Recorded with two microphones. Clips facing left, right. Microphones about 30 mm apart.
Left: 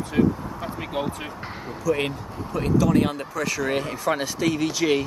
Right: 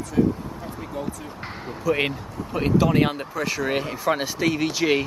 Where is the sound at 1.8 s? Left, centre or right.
Right.